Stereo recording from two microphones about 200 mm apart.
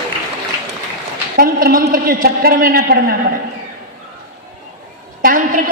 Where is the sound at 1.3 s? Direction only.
45° right (ahead or behind).